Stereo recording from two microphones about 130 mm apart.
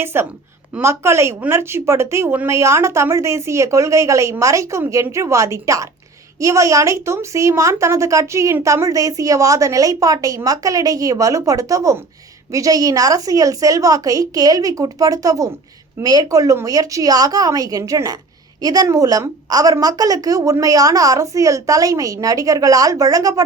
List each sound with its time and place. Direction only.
0.0 s a woman's voice: 20° right (ahead or behind)